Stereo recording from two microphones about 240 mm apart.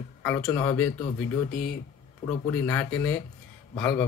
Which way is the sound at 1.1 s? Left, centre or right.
Left.